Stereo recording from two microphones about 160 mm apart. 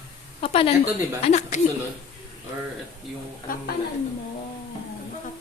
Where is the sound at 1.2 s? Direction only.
45° left (ahead or behind).